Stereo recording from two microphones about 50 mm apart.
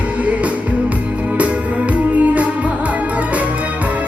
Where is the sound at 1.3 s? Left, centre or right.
Right.